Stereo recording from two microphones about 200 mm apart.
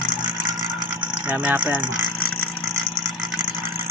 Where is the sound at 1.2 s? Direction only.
5° right (ahead or behind).